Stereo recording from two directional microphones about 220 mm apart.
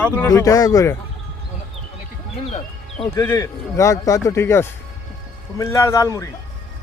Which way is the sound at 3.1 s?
10° left (ahead or behind).